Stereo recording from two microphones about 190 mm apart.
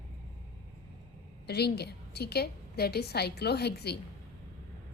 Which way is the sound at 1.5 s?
60° left (ahead or behind).